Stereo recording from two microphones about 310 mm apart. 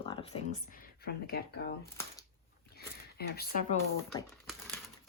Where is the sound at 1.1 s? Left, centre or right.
Left.